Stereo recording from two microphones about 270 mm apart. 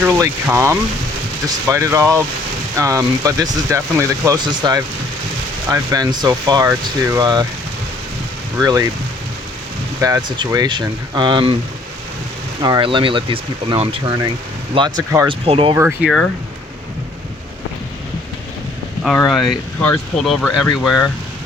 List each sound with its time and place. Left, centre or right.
0.0 s speech: centre
8.5 s speech: centre
10.0 s speech: centre
12.6 s speech: centre
19.0 s speech: centre